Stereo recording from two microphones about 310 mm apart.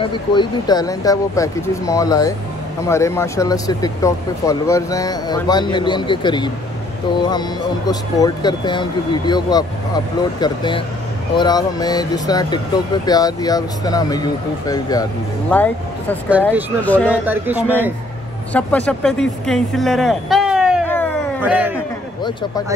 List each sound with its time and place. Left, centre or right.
0.0 s speech: centre
17.2 s speech: centre
18.5 s speech: centre